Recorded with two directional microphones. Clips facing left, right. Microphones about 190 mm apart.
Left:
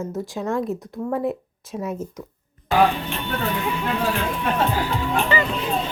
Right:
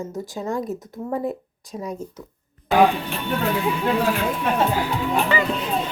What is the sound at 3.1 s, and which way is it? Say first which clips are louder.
Speech: right 2 dB; 5° right (ahead or behind).